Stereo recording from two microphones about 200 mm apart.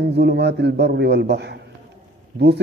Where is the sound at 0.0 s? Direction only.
55° right (ahead or behind).